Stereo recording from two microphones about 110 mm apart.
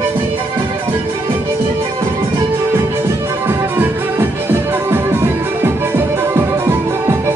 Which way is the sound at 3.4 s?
20° right (ahead or behind).